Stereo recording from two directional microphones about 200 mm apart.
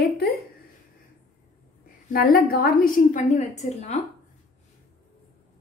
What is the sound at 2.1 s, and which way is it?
A woman's voice, 45° left (ahead or behind).